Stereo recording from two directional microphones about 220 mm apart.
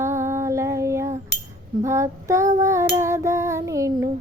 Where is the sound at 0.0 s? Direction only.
10° right (ahead or behind).